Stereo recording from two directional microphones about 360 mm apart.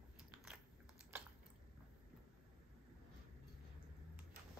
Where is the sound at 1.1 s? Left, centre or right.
Centre.